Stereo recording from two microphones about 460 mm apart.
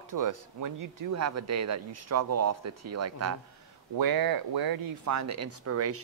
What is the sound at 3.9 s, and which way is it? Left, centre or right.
Speech, right.